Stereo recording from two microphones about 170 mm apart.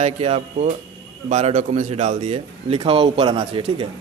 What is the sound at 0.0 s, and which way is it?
A man's voice, 40° right (ahead or behind).